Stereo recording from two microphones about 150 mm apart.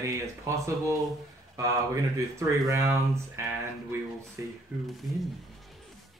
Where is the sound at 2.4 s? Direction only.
20° right (ahead or behind).